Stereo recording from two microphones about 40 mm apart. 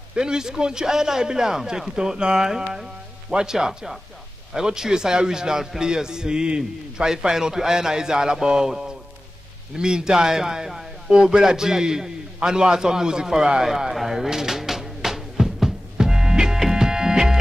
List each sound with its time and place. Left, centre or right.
0.1 s a man's voice: centre
11.4 s a man's voice: centre
16.0 s music: centre